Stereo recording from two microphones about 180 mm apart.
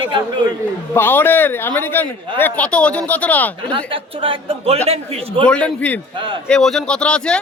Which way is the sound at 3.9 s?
30° right (ahead or behind).